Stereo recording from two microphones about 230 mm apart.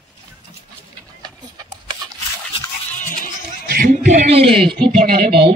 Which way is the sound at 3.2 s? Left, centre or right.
Right.